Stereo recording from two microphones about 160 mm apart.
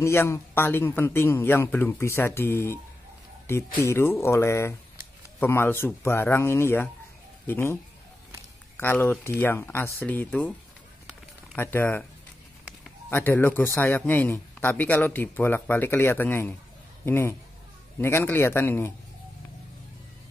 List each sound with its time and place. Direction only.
0.0 s speech: 15° left (ahead or behind)
11.5 s speech: 10° left (ahead or behind)
13.1 s speech: 15° left (ahead or behind)